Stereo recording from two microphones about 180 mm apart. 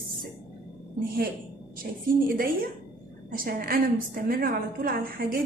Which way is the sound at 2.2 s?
55° right (ahead or behind).